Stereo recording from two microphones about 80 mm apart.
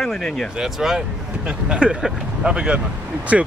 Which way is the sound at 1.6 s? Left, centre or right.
Centre.